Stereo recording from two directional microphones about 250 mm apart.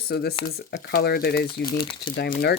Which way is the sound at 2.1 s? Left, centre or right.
Left.